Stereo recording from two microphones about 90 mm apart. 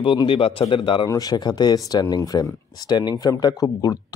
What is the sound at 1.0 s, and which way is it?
A man's voice, 45° left (ahead or behind).